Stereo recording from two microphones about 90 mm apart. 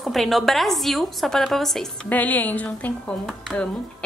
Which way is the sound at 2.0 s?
20° left (ahead or behind).